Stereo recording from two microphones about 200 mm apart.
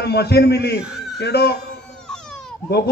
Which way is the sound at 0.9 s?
Centre (ahead or behind).